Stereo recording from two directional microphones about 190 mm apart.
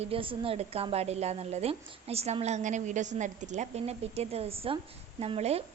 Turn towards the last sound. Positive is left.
turn(degrees=-35)  # may be behind; listen again after turning